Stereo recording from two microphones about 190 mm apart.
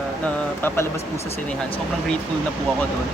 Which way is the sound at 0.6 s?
10° left (ahead or behind).